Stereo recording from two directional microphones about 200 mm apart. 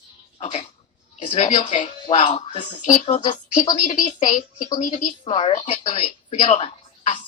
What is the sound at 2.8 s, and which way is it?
Speech, 40° left (ahead or behind).